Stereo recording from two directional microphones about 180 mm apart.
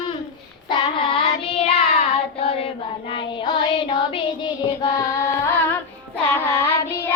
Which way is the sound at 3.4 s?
25° left (ahead or behind).